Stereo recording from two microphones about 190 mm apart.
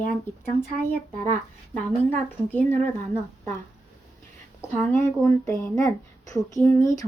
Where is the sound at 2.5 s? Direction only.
10° left (ahead or behind).